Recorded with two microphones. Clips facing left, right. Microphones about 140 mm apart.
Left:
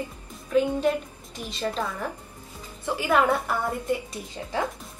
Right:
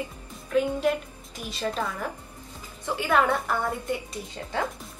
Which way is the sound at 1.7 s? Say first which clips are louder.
Left 1 dB; centre (ahead or behind).